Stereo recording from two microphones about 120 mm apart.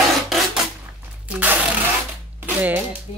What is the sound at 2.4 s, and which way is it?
Speech, 15° right (ahead or behind).